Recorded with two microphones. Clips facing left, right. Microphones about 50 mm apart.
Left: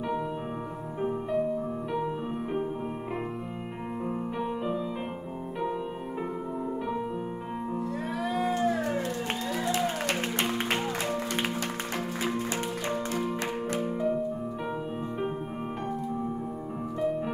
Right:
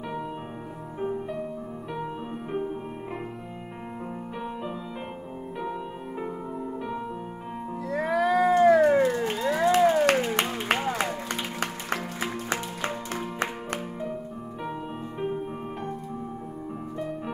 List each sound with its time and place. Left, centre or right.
7.9 s cat: right
11.6 s music: right